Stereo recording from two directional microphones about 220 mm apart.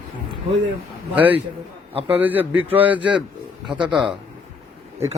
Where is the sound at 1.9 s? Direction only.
25° right (ahead or behind).